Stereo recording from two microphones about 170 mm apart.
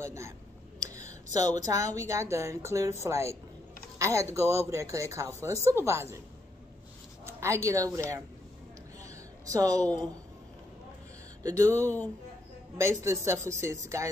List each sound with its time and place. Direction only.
0.0 s speech: 15° right (ahead or behind)
0.9 s a sound: 20° right (ahead or behind)
1.7 s speech: 20° right (ahead or behind)
7.2 s speech: 15° right (ahead or behind)
9.0 s a sound: 20° right (ahead or behind)
11.4 s speech: 20° right (ahead or behind)